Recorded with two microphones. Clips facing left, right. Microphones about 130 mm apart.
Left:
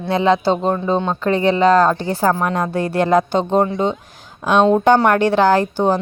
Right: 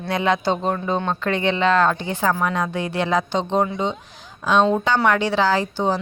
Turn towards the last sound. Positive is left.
turn(degrees=50)  # may be behind; listen again after turning